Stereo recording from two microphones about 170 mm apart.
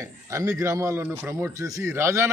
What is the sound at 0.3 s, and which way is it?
A man's voice, 15° right (ahead or behind).